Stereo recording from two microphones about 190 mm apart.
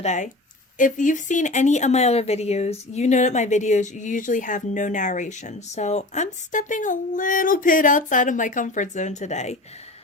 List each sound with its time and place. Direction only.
0.0 s a woman's voice: 40° left (ahead or behind)